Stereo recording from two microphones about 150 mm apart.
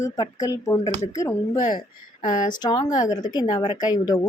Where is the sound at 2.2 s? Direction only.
60° left (ahead or behind).